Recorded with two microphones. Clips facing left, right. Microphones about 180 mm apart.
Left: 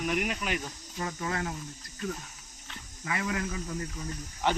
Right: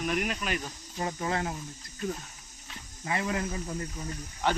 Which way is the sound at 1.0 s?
25° right (ahead or behind).